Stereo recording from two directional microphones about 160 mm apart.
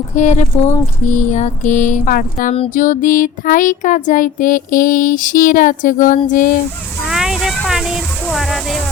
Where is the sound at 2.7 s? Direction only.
55° left (ahead or behind).